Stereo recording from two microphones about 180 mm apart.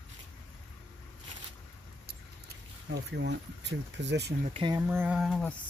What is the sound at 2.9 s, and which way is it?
Speech, 75° right (ahead or behind).